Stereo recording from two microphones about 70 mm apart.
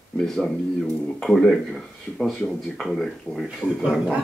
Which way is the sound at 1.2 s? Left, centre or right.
Centre.